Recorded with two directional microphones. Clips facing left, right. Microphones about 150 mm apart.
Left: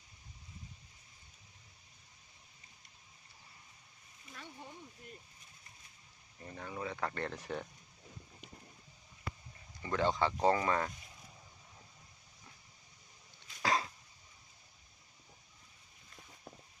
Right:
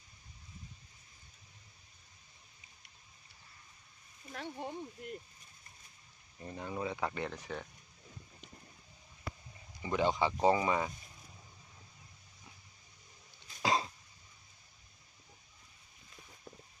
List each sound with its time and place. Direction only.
4.3 s a sound: 70° right (ahead or behind)
6.4 s speech: 20° right (ahead or behind)
7.3 s speech: 5° left (ahead or behind)
9.8 s speech: 15° right (ahead or behind)
13.6 s cough: 20° right (ahead or behind)